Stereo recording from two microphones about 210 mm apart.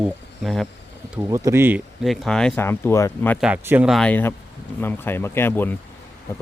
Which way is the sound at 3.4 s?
5° right (ahead or behind).